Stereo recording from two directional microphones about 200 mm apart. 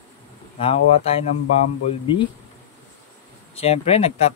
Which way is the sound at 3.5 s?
30° left (ahead or behind).